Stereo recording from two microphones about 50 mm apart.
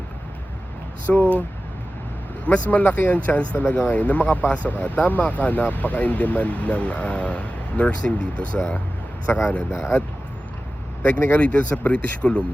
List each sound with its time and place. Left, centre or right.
1.2 s speech: right
2.5 s speech: left
9.3 s speech: left
11.0 s speech: left
11.3 s speech: left